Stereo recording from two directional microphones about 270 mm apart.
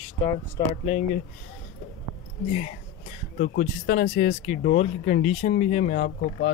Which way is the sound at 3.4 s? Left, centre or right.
Left.